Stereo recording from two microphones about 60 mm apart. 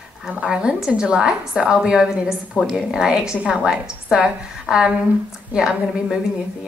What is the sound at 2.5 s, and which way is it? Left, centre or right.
Speech, left.